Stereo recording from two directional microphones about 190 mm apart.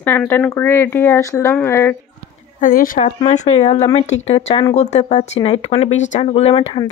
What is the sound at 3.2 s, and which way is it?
Speech, 35° left (ahead or behind).